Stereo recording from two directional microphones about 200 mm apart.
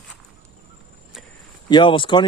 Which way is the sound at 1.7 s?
25° left (ahead or behind).